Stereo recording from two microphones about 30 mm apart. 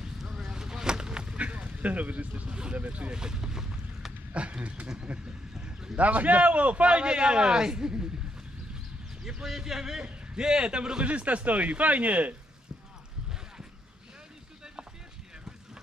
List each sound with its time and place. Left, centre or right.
0.0 s vehicle: right
1.5 s a sound: right
1.8 s speech: right
3.1 s boat: right
4.3 s speech: right
5.1 s a man's voice: right
5.9 s a man's voice: right
9.2 s a man's voice: centre
11.1 s speech: right